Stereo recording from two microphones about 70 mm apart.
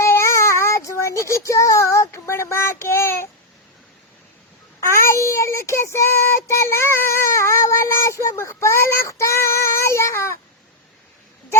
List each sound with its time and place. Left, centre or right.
0.0 s child singing: left
4.8 s child singing: left